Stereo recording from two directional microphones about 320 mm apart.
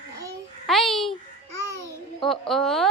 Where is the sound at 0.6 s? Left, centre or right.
Centre.